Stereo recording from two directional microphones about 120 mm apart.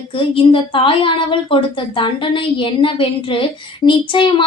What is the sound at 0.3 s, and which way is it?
A woman's voice, 45° left (ahead or behind).